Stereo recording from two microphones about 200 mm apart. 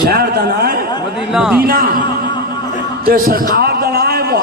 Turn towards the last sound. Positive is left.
turn(degrees=-50)  # may be behind; listen again after turning